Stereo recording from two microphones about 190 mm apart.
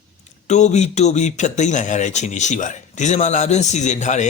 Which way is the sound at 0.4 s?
35° left (ahead or behind).